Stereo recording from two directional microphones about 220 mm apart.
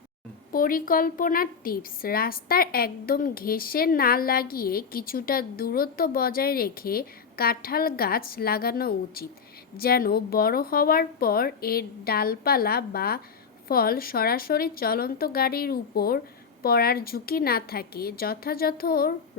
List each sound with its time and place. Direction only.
0.5 s a woman's voice: 40° left (ahead or behind)